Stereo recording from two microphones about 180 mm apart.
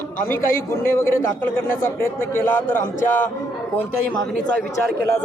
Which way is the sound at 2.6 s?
50° left (ahead or behind).